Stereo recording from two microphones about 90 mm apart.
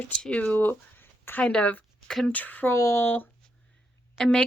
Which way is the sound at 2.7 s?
35° left (ahead or behind).